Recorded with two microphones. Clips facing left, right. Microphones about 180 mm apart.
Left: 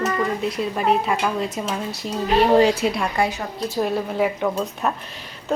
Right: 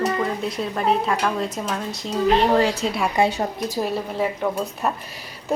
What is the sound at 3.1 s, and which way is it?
Speech, 25° right (ahead or behind).